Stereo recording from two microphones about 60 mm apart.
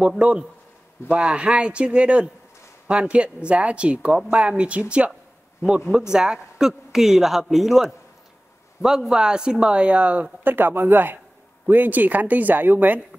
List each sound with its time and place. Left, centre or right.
0.2 s a man's voice: centre
10.4 s speech: right